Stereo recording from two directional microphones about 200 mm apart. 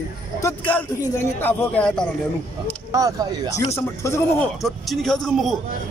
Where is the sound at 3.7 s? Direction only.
15° left (ahead or behind).